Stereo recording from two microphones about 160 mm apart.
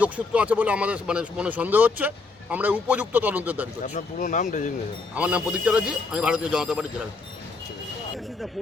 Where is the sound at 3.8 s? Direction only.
50° left (ahead or behind).